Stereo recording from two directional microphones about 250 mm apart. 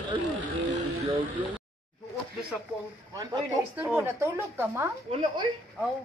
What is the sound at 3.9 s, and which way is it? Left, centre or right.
Speech, centre.